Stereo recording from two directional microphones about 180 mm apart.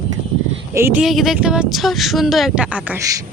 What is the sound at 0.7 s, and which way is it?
Speech, 15° right (ahead or behind).